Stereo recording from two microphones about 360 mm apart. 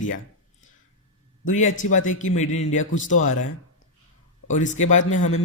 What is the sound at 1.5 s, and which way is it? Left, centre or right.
Speech, left.